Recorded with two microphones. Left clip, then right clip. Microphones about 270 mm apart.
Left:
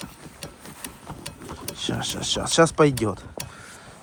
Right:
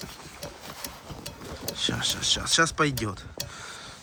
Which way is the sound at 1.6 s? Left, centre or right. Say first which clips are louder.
Right 1 dB; centre.